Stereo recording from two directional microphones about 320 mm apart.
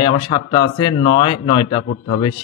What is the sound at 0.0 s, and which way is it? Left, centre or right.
A man's voice, centre.